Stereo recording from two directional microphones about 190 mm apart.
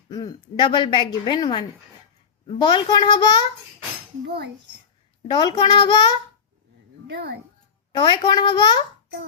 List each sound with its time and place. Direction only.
0.1 s a woman's voice: 20° left (ahead or behind)
5.3 s a woman's voice: 25° left (ahead or behind)
7.1 s speech: 60° right (ahead or behind)
7.9 s a woman's voice: 25° left (ahead or behind)